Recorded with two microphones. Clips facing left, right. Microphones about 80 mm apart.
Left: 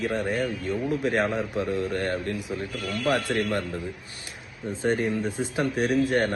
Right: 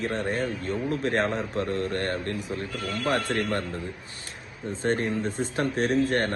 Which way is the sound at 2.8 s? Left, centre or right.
Right.